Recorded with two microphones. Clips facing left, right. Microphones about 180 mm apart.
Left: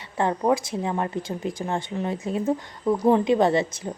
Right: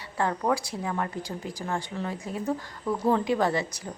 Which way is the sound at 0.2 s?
20° left (ahead or behind).